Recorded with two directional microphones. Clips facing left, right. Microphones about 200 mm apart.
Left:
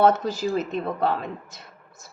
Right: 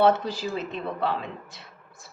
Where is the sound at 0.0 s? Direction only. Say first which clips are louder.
Left 2 dB; 45° left (ahead or behind).